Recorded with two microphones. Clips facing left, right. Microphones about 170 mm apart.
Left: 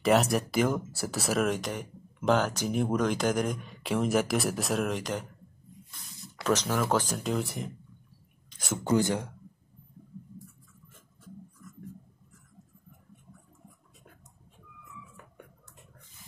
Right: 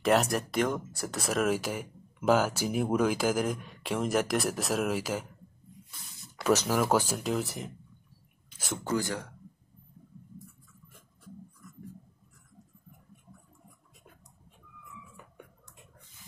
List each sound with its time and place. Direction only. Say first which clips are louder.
0.0 s speech: left 1 dB; centre (ahead or behind)
8.5 s a sound: left 3 dB; 5° right (ahead or behind)
8.8 s speech: left 5 dB; 20° left (ahead or behind)